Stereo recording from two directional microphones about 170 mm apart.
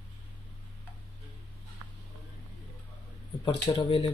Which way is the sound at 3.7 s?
35° left (ahead or behind).